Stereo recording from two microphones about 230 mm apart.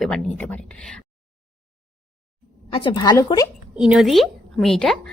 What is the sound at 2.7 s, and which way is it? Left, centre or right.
Speech, left.